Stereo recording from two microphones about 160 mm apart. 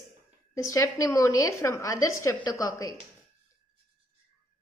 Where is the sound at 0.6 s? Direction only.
20° left (ahead or behind).